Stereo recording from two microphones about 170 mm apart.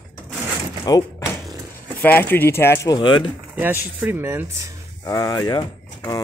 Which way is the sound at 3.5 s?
10° right (ahead or behind).